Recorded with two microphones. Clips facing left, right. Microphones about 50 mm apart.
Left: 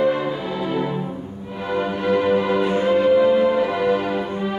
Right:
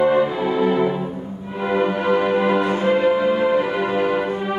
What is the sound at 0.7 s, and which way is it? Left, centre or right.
Music, right.